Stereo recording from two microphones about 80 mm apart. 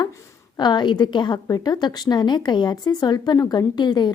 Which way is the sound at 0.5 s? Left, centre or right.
Left.